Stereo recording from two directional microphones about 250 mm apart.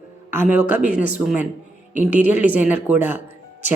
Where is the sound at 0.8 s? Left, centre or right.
Left.